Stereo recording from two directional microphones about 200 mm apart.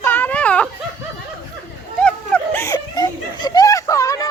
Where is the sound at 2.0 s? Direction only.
10° left (ahead or behind).